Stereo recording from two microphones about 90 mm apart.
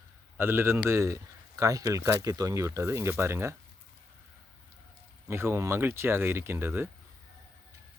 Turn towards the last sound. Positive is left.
turn(degrees=-25)  # may be behind; listen again after turning